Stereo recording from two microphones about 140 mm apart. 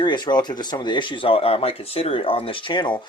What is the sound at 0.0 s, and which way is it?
Speech, 35° left (ahead or behind).